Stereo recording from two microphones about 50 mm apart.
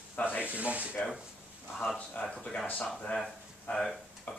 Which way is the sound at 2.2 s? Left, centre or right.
Left.